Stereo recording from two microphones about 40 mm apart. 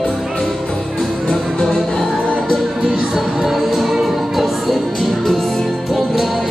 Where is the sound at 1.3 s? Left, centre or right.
Centre.